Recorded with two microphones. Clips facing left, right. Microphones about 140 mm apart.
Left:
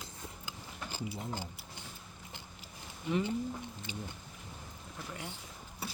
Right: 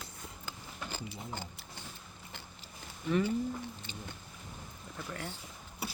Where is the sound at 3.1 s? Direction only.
20° left (ahead or behind).